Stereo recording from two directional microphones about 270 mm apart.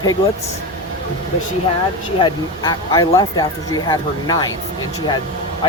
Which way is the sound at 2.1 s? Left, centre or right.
Centre.